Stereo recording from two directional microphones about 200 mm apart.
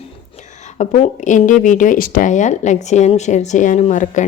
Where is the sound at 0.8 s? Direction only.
35° left (ahead or behind).